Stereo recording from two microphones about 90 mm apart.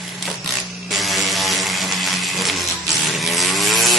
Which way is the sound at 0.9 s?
Centre (ahead or behind).